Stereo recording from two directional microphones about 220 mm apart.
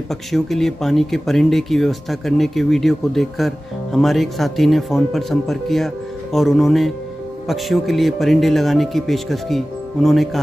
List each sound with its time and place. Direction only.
0.1 s speech: centre (ahead or behind)